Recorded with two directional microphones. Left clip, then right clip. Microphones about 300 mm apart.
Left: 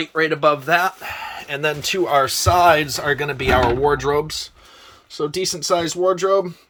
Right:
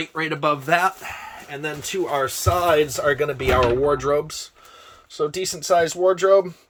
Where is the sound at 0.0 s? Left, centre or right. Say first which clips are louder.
Left 6 dB; centre.